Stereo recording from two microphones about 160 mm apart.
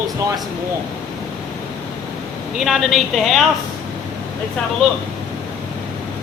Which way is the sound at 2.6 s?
Centre (ahead or behind).